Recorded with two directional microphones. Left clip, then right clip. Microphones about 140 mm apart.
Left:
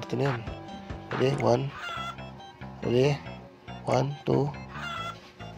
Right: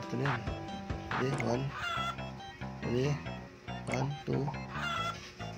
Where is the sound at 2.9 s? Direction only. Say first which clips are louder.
Left 10 dB; 60° left (ahead or behind).